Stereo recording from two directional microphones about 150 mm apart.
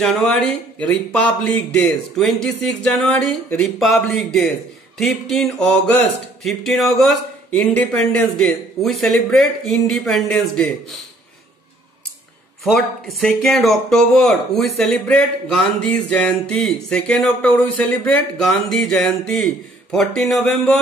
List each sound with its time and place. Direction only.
0.0 s speech: 5° left (ahead or behind)
12.6 s speech: centre (ahead or behind)